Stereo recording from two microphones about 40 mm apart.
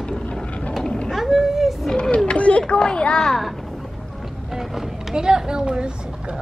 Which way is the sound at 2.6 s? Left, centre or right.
Left.